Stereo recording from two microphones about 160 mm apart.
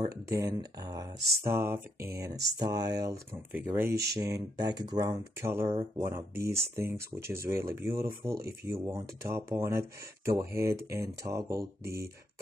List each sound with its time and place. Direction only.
0.3 s speech: 20° right (ahead or behind)